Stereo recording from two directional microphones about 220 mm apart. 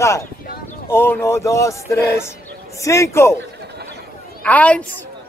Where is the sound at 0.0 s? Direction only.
15° left (ahead or behind).